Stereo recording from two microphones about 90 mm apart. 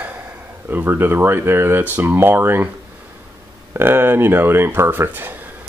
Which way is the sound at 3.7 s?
25° right (ahead or behind).